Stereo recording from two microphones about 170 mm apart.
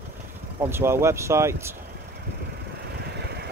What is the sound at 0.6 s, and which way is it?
Speech, 15° right (ahead or behind).